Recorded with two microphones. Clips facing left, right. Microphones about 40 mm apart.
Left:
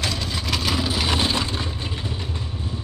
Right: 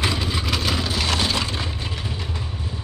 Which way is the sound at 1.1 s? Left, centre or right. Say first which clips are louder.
Even; left.